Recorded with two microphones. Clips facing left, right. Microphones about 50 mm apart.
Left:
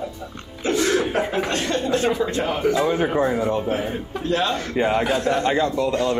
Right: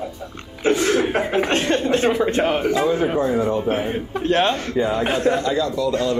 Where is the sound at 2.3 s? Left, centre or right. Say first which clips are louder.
Right 4 dB; right.